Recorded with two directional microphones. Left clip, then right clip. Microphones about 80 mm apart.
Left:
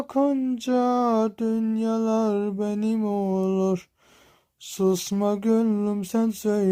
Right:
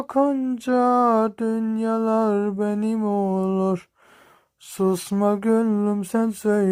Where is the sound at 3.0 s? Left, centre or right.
Right.